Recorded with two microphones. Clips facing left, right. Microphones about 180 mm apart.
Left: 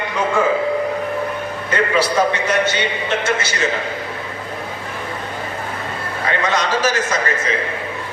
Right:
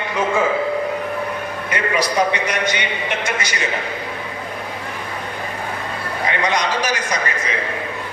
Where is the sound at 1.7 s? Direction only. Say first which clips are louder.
Left 3 dB; 15° right (ahead or behind).